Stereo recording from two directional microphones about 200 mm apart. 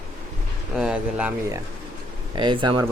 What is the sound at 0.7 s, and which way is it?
Speech, 5° right (ahead or behind).